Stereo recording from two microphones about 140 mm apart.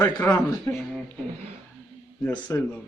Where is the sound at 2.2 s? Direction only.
10° left (ahead or behind).